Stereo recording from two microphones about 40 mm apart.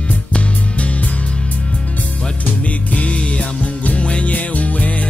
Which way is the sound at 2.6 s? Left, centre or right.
Left.